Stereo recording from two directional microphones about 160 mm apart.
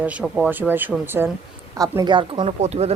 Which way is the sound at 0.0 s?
10° right (ahead or behind).